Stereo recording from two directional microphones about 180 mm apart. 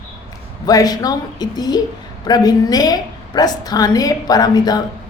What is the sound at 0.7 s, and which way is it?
A woman's voice, 20° left (ahead or behind).